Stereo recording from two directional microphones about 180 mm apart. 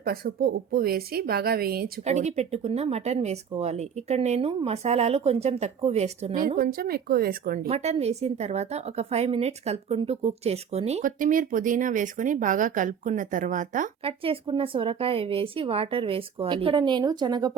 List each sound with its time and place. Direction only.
0.0 s a woman's voice: 55° right (ahead or behind)
2.0 s a woman's voice: 40° right (ahead or behind)
6.6 s speech: 55° right (ahead or behind)
7.7 s a woman's voice: 35° right (ahead or behind)
14.0 s a woman's voice: 30° right (ahead or behind)